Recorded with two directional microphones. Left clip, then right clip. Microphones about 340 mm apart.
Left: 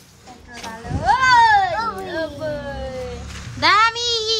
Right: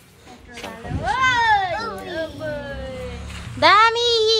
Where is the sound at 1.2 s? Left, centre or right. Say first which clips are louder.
Left 4 dB; left.